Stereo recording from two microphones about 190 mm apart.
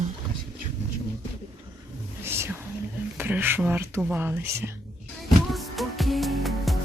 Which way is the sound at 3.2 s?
10° right (ahead or behind).